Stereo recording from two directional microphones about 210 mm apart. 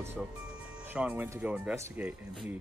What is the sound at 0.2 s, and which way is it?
Speech, centre (ahead or behind).